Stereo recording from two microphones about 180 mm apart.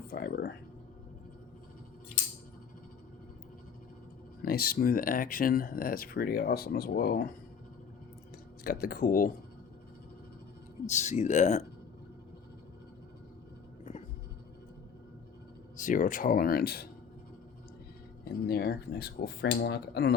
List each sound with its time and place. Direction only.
0.1 s speech: 60° left (ahead or behind)
4.4 s speech: 55° left (ahead or behind)
8.6 s speech: 55° left (ahead or behind)
10.8 s speech: 40° left (ahead or behind)
15.8 s speech: 45° left (ahead or behind)
18.4 s speech: 60° left (ahead or behind)